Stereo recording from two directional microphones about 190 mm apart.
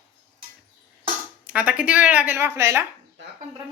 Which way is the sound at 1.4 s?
5° right (ahead or behind).